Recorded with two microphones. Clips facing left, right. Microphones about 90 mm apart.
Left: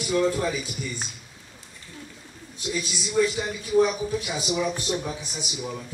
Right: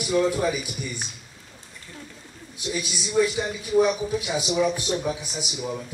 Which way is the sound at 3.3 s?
5° left (ahead or behind).